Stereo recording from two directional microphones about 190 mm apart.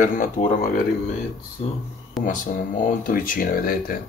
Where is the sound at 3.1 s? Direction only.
45° left (ahead or behind).